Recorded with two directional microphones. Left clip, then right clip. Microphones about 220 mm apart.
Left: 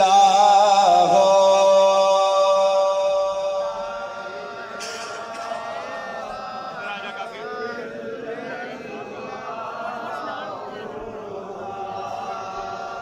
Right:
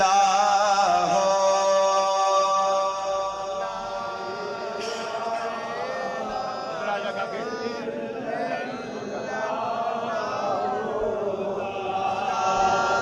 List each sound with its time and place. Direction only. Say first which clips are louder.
0.0 s music: left 5 dB; 15° left (ahead or behind)